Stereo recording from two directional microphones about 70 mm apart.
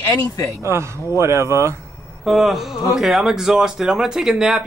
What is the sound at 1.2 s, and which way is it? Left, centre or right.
Speech, right.